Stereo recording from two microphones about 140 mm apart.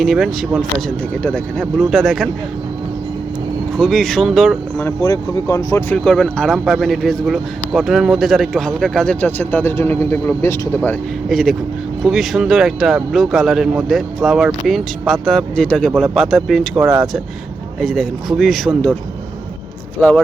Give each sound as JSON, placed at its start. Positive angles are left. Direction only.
{"t": 0.0, "sound": "speech", "side_deg": 0}
{"t": 3.8, "sound": "speech", "side_deg": 0}
{"t": 4.8, "sound": "speech", "side_deg": 20}
{"t": 6.1, "sound": "speech", "side_deg": 5}
{"t": 11.3, "sound": "speech", "side_deg": 0}
{"t": 20.0, "sound": "speech", "side_deg": 5}